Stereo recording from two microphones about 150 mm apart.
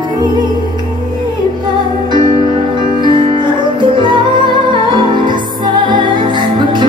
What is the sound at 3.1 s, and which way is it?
Music, 30° right (ahead or behind).